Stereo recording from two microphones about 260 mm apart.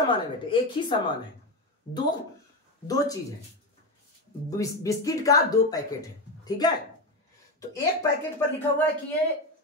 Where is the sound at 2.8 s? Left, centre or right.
Centre.